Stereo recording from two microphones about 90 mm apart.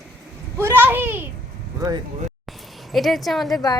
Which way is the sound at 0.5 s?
25° right (ahead or behind).